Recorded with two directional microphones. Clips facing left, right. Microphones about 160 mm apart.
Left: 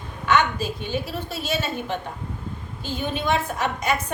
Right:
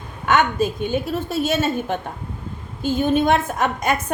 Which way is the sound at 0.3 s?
50° right (ahead or behind).